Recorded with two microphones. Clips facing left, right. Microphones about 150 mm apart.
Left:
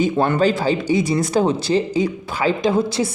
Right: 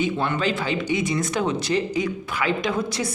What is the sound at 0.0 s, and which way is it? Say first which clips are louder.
Speech: left 7 dB; 40° left (ahead or behind).